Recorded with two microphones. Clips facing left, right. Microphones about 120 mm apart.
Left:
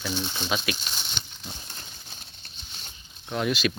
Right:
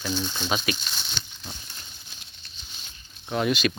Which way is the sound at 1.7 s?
40° left (ahead or behind).